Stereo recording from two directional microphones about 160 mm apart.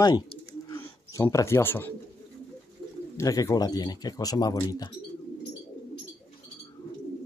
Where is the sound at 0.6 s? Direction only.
15° left (ahead or behind).